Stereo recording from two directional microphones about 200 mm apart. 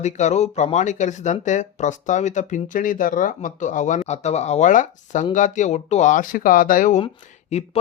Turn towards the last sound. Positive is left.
turn(degrees=30)  # may be behind; listen again after turning